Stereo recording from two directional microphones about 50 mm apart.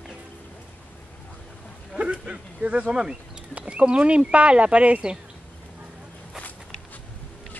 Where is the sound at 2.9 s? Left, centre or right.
Centre.